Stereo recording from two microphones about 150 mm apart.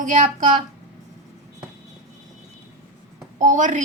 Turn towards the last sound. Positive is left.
turn(degrees=-55)  # may be behind; listen again after turning